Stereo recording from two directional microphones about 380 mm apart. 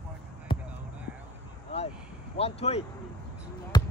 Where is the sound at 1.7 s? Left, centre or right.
Centre.